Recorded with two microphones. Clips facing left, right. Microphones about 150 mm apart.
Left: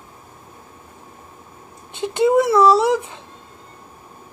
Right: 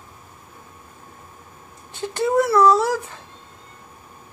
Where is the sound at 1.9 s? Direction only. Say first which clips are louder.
Left 5 dB; 20° left (ahead or behind).